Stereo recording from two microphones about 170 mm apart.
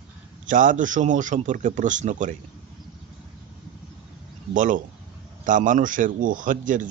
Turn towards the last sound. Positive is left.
turn(degrees=-50)  # may be behind; listen again after turning